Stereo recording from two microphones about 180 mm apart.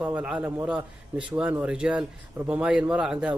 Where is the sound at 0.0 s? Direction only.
5° right (ahead or behind).